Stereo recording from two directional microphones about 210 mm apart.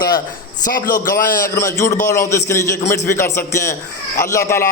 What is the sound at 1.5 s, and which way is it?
A man's voice, 15° left (ahead or behind).